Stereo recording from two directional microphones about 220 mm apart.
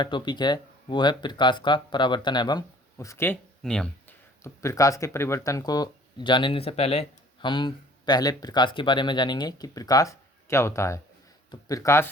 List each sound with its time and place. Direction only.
0.0 s speech: 20° left (ahead or behind); by 3.8 s 5° left (ahead or behind)
4.4 s speech: 15° left (ahead or behind)